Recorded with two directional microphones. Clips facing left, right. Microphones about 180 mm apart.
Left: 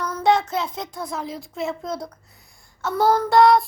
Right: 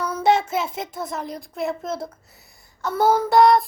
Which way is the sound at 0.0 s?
5° right (ahead or behind).